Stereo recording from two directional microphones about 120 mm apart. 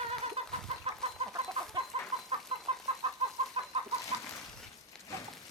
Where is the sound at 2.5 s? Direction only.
55° right (ahead or behind).